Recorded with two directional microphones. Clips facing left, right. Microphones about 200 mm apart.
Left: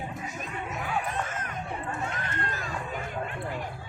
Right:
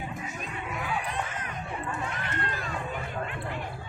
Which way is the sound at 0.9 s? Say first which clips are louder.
Left 2 dB; 45° left (ahead or behind).